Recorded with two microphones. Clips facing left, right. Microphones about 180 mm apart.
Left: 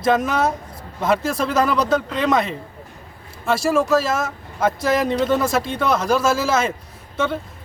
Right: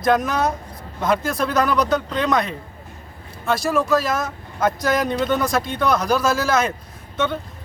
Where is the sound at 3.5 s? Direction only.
5° left (ahead or behind).